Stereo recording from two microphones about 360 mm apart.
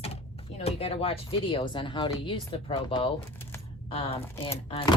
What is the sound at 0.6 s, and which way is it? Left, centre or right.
Speech, centre.